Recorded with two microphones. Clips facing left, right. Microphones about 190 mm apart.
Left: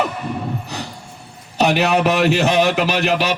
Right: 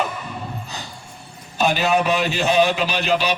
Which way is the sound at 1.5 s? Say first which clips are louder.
Left 3 dB; 75° left (ahead or behind).